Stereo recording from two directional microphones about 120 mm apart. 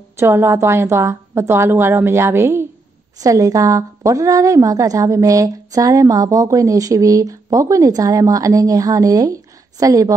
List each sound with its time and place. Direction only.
0.2 s a woman's voice: 20° right (ahead or behind)